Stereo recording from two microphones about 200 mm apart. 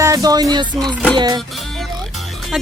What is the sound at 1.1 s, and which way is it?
Music, 20° right (ahead or behind).